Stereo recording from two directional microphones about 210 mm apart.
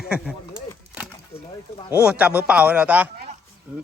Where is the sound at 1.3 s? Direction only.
25° left (ahead or behind).